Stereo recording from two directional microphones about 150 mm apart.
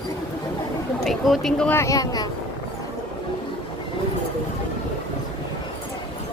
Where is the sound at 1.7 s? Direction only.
20° left (ahead or behind).